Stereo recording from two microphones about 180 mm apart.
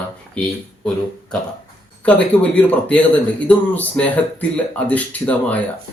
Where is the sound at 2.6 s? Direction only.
10° left (ahead or behind).